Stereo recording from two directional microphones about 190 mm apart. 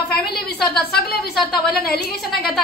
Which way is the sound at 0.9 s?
55° left (ahead or behind).